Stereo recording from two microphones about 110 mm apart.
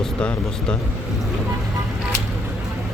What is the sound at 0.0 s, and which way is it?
Speech, 5° left (ahead or behind).